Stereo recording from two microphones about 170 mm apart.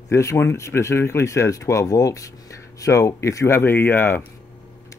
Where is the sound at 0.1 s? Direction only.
15° left (ahead or behind).